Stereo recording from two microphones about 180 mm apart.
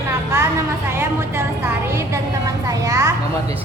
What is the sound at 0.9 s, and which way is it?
A woman's voice, 15° right (ahead or behind).